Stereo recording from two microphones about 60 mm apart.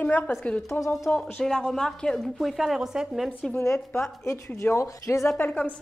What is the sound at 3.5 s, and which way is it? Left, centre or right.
Speech, left.